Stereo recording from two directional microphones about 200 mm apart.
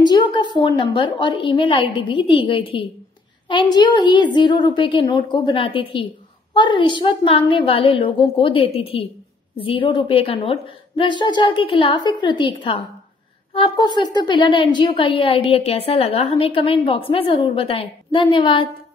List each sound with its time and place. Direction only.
0.0 s a woman's voice: 20° left (ahead or behind)